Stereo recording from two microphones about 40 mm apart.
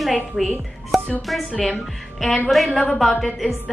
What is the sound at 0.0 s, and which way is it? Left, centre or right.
Speech, centre.